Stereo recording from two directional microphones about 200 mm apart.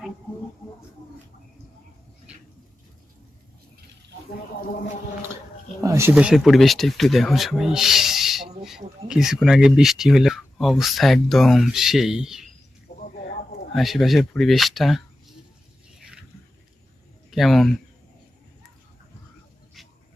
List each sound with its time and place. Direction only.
5.8 s speech: 15° right (ahead or behind)
12.9 s a sound: 50° left (ahead or behind)
13.7 s speech: centre (ahead or behind)
17.3 s speech: centre (ahead or behind)